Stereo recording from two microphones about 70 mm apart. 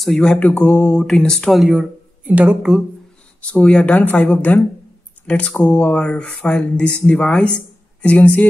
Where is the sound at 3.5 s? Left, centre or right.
Centre.